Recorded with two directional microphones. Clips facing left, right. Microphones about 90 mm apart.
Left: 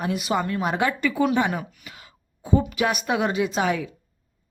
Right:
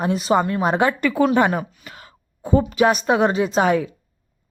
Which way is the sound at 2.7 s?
35° right (ahead or behind).